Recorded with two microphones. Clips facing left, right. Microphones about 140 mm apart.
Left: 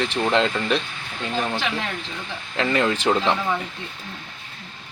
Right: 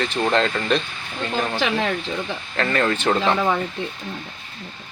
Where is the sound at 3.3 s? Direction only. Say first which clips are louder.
Right 4 dB; 60° right (ahead or behind).